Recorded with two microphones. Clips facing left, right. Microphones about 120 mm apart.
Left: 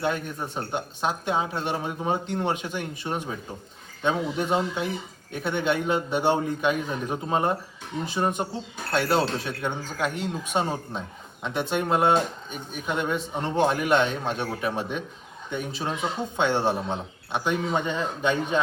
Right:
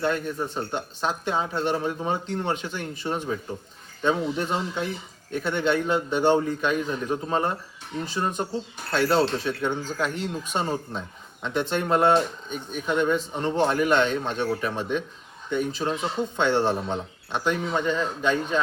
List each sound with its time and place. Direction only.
0.0 s speech: 10° left (ahead or behind)